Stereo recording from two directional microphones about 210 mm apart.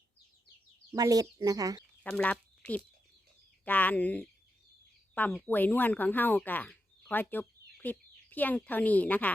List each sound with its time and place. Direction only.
0.9 s speech: 15° right (ahead or behind)
2.0 s speech: 5° left (ahead or behind)